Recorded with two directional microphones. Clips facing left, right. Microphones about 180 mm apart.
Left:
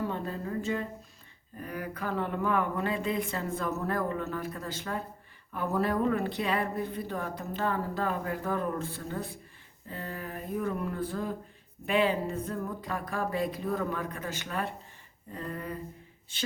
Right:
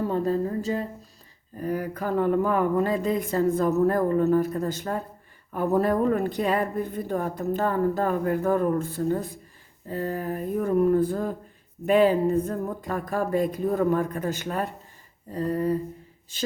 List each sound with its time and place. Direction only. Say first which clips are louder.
0.1 s speech: right 9 dB; 35° right (ahead or behind)